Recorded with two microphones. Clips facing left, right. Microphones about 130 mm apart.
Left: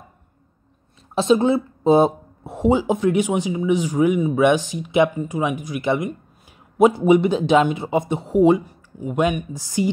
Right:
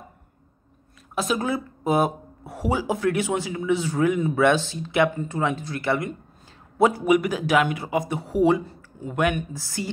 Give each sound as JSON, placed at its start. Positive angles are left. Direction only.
{"t": 1.1, "sound": "speech", "side_deg": 25}